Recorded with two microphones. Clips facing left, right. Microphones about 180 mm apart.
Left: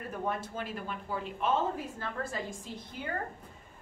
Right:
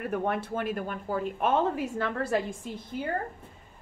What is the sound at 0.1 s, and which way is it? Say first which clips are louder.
A woman's voice: right 4 dB; 65° right (ahead or behind).